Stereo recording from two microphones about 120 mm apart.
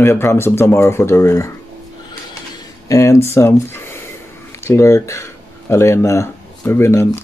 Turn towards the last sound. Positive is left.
turn(degrees=20)  # may be behind; listen again after turning